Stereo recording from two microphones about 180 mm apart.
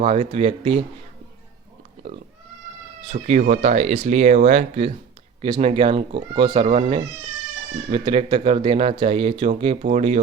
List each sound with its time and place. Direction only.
0.0 s speech: 35° right (ahead or behind)
3.1 s speech: 40° right (ahead or behind)